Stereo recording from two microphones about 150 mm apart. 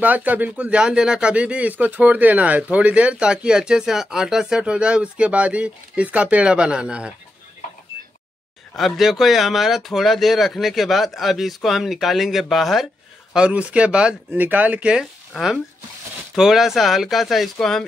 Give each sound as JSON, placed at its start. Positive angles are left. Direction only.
{"t": 0.0, "sound": "speech", "side_deg": -10}
{"t": 8.7, "sound": "speech", "side_deg": 0}